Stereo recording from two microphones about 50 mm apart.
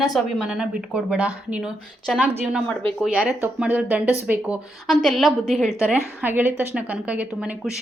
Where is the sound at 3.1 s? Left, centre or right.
Right.